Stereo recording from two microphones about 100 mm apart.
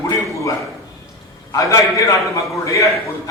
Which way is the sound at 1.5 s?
35° left (ahead or behind).